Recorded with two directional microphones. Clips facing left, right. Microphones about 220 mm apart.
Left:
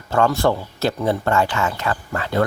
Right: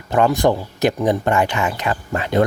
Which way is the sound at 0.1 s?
15° right (ahead or behind).